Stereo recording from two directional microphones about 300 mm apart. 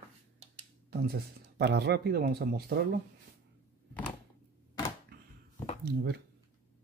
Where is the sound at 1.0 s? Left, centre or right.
Right.